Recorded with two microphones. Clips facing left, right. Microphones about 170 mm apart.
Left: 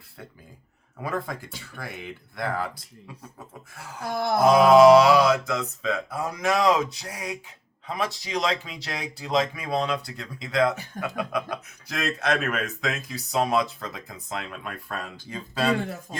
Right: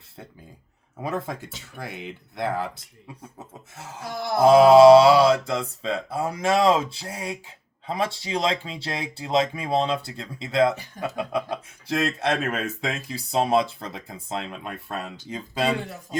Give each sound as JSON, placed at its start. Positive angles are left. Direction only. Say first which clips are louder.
{"t": 1.0, "sound": "mantra", "louder": "right 1 dB", "side_deg": -25}
{"t": 4.0, "sound": "a sound", "louder": "left 3 dB", "side_deg": 50}
{"t": 4.4, "sound": "mantra", "louder": "right 3 dB", "side_deg": -30}